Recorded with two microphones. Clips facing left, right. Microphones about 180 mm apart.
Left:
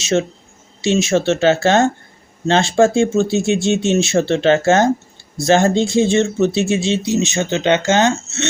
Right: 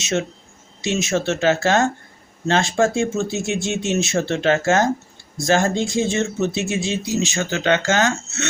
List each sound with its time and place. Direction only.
0.0 s speech: 30° left (ahead or behind)